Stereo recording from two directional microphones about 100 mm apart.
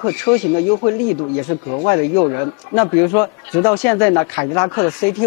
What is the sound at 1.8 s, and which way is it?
Speech, 25° left (ahead or behind).